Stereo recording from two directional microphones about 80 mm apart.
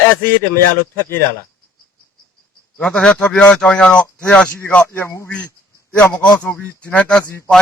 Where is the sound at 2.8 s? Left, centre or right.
Centre; by 5.3 s left.